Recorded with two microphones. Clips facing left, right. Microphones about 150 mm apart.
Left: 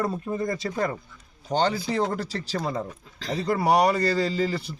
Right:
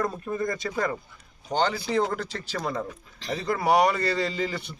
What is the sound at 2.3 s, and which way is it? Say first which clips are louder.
A man's voice: left 2 dB; 25° left (ahead or behind).